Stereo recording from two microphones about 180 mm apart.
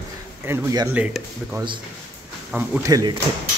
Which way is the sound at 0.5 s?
20° right (ahead or behind).